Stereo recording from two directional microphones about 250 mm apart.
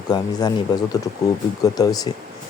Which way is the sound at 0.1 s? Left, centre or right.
Centre.